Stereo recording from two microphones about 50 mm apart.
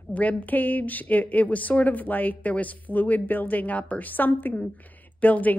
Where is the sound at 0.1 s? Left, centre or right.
Left.